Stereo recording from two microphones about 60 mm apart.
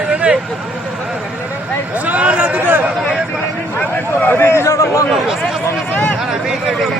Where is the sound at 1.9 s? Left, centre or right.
Right.